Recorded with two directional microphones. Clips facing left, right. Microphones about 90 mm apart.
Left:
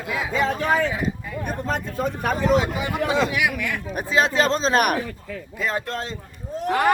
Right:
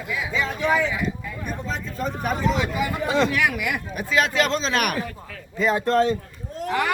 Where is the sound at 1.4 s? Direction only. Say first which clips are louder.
Left 5 dB; 55° left (ahead or behind).